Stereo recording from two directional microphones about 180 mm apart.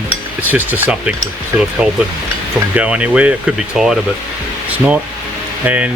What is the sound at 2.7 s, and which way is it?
Speech, 5° right (ahead or behind).